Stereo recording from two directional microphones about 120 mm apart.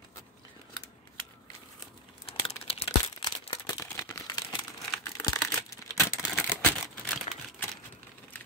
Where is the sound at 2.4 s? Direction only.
55° left (ahead or behind).